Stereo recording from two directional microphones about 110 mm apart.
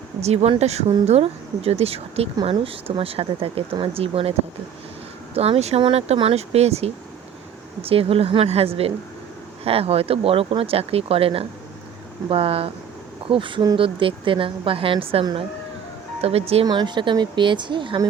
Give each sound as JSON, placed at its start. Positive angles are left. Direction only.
{"t": 0.2, "sound": "speech", "side_deg": -75}
{"t": 7.8, "sound": "a woman's voice", "side_deg": -60}
{"t": 16.6, "sound": "a woman's voice", "side_deg": -45}